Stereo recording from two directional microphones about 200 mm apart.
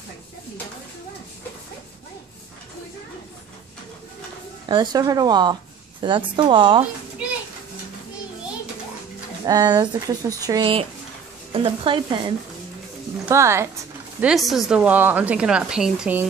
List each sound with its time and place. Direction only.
4.6 s a woman's voice: 20° right (ahead or behind)
9.5 s speech: 20° right (ahead or behind)
13.2 s speech: 15° right (ahead or behind)
14.2 s a woman's voice: centre (ahead or behind)